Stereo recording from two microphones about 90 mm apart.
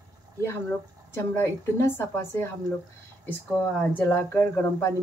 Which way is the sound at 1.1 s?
30° left (ahead or behind).